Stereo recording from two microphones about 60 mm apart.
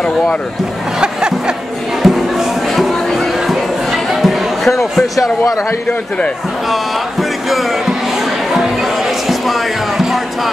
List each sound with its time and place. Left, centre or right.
2.0 s a sound: centre
6.7 s speech: centre
8.5 s music: centre